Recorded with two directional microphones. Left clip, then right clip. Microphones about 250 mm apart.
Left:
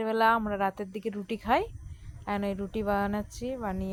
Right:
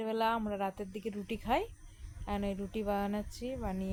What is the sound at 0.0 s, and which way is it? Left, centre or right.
Speech, centre.